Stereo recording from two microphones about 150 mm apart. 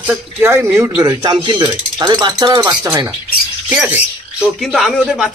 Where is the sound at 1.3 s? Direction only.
30° right (ahead or behind); by 4.0 s 10° right (ahead or behind).